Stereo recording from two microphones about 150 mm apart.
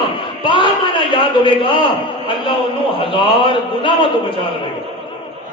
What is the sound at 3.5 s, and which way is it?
Speech, 35° left (ahead or behind).